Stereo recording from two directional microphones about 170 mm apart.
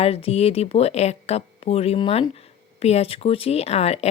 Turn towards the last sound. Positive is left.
turn(degrees=40)  # may be behind; listen again after turning